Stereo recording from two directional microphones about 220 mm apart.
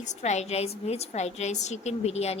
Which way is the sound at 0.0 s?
30° left (ahead or behind).